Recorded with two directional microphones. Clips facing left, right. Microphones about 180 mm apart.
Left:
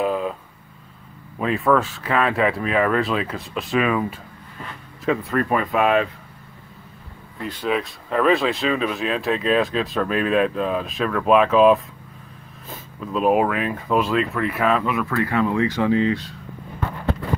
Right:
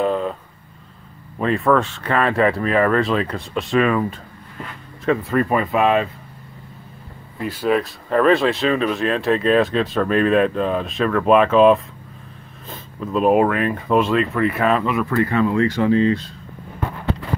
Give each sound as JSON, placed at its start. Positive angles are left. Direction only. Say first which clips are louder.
{"t": 0.0, "sound": "vehicle", "louder": "right 2 dB", "side_deg": 5}
{"t": 1.4, "sound": "speech", "louder": "right 2 dB", "side_deg": 5}
{"t": 5.0, "sound": "speech", "louder": "right 3 dB", "side_deg": 0}
{"t": 7.3, "sound": "speech", "louder": "right 4 dB", "side_deg": -5}
{"t": 15.2, "sound": "speech", "louder": "right 2 dB", "side_deg": 15}